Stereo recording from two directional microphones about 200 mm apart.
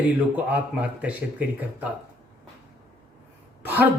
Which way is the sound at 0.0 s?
5° right (ahead or behind).